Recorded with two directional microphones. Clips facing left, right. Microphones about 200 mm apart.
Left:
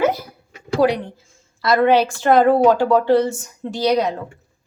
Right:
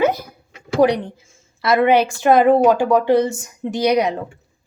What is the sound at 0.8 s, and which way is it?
Speech, 15° right (ahead or behind).